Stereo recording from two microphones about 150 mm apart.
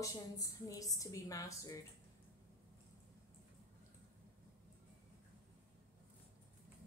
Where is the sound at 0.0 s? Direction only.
20° left (ahead or behind).